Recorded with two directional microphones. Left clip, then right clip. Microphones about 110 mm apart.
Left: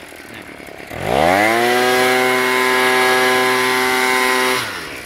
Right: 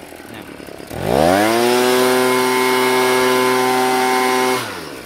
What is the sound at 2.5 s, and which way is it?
Vehicle, 25° right (ahead or behind).